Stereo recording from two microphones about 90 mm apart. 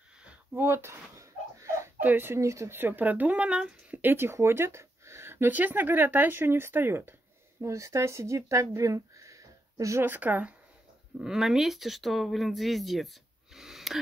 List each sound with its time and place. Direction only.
0.6 s a sound: 30° right (ahead or behind)
2.0 s speech: 20° right (ahead or behind)
4.0 s speech: 25° right (ahead or behind)
10.0 s speech: 20° right (ahead or behind)
11.1 s speech: 5° right (ahead or behind)